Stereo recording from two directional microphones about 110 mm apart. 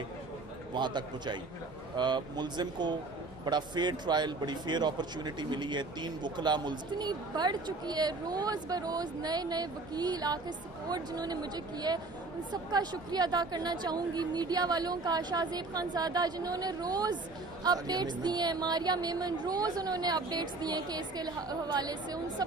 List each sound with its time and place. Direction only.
0.7 s speech: 40° right (ahead or behind)